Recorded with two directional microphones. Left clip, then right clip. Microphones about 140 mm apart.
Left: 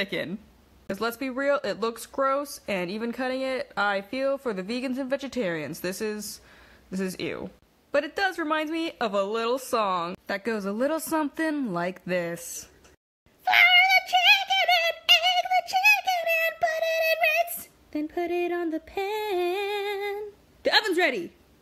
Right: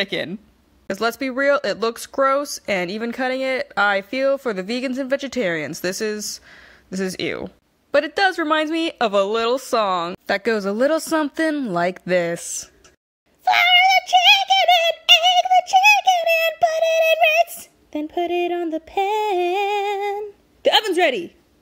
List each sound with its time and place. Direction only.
0.0 s speech: 30° right (ahead or behind)
13.4 s synthetic singing: 25° right (ahead or behind)
20.6 s speech: 25° right (ahead or behind)